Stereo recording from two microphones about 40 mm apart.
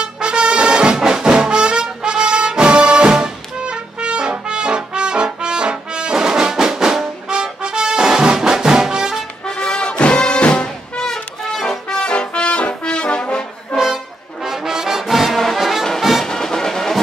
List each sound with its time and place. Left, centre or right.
0.0 s brass instrument: right
9.6 s music: left
11.1 s music: centre
12.1 s brass instrument: left
14.4 s brass instrument: centre
16.3 s music: centre